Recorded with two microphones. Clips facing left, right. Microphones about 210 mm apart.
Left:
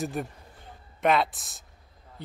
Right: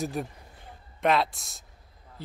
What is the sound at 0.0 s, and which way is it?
Speech, centre (ahead or behind).